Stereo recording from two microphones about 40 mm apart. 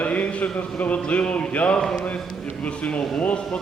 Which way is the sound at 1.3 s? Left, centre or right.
Left.